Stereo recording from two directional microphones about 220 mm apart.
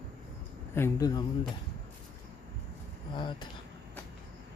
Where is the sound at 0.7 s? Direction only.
15° left (ahead or behind).